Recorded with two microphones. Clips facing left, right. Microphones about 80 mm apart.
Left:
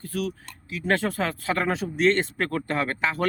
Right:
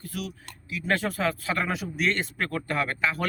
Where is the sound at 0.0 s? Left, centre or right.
Left.